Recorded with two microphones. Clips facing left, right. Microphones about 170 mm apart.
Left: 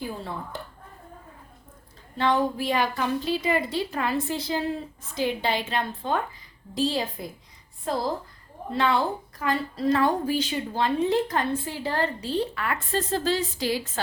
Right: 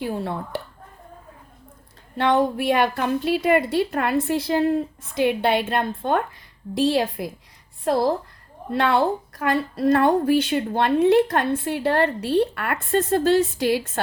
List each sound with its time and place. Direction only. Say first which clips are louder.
0.0 s a woman's voice: right 6 dB; 65° right (ahead or behind)
2.1 s a woman's voice: right 4 dB; 65° right (ahead or behind)